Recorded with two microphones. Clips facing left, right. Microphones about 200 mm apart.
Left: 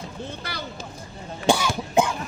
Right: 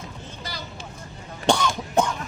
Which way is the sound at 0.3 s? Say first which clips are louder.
Left 3 dB; 60° left (ahead or behind).